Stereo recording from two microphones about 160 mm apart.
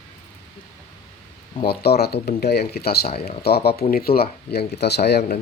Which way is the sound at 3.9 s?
70° left (ahead or behind).